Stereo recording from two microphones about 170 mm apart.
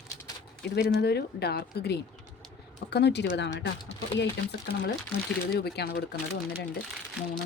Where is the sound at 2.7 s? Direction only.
90° left.